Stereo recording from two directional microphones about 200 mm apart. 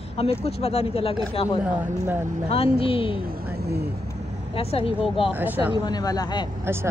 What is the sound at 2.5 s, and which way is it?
Speech, 30° left (ahead or behind).